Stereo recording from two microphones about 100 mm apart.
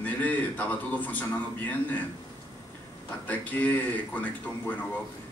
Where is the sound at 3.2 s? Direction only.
15° left (ahead or behind).